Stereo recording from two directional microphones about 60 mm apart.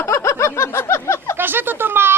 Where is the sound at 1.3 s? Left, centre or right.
Right.